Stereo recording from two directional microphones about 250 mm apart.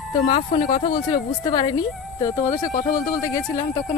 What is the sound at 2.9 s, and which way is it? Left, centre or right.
Speech, left.